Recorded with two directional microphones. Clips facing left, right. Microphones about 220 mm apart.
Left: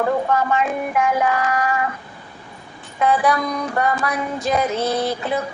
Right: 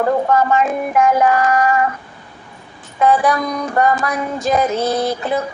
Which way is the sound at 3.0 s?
45° right (ahead or behind).